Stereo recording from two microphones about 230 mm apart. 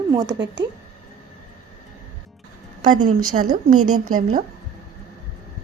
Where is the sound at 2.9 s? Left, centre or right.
Right.